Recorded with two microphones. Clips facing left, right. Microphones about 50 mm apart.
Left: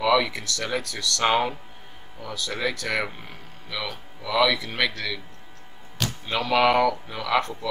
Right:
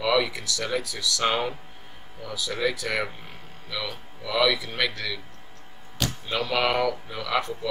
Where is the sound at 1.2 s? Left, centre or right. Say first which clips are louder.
Left 4 dB; centre.